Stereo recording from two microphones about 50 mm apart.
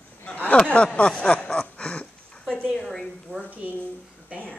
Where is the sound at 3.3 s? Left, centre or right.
Right.